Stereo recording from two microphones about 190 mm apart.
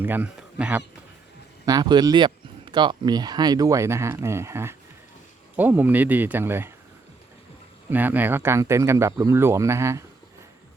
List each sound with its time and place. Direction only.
0.0 s speech: 10° right (ahead or behind)
1.6 s speech: 20° right (ahead or behind)
7.9 s speech: 10° right (ahead or behind)